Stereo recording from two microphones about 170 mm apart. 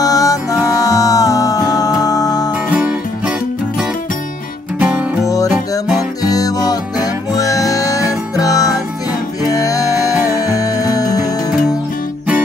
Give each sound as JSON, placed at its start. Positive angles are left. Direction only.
{"t": 0.0, "sound": "music", "side_deg": 20}
{"t": 2.7, "sound": "music", "side_deg": -5}
{"t": 4.7, "sound": "music", "side_deg": -10}
{"t": 5.2, "sound": "music", "side_deg": 20}